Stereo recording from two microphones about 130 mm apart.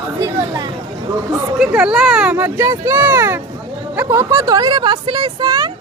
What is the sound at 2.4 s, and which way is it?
Speech, 20° right (ahead or behind).